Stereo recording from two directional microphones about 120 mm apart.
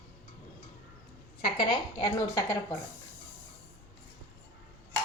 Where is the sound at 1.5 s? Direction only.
40° left (ahead or behind).